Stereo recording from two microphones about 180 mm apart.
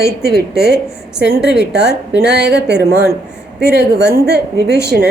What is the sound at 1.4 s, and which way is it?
A woman's voice, 70° right (ahead or behind).